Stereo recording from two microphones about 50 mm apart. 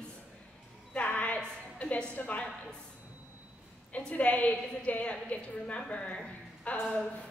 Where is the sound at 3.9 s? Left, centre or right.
Left.